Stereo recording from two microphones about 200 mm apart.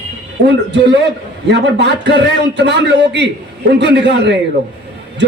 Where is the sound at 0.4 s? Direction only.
60° right (ahead or behind).